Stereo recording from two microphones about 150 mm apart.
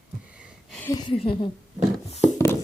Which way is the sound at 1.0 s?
35° left (ahead or behind).